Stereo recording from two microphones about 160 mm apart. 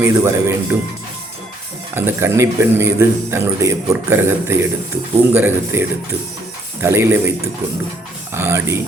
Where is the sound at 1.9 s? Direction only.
15° right (ahead or behind).